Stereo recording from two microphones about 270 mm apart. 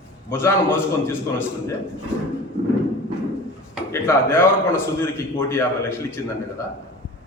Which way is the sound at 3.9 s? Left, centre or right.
Centre.